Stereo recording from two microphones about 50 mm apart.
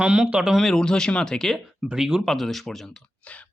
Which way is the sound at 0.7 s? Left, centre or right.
Centre.